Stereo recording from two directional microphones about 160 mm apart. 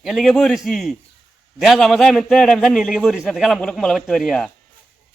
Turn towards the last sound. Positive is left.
turn(degrees=5)  # may be behind; listen again after turning